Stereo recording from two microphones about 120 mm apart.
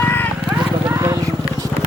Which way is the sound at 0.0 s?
15° left (ahead or behind).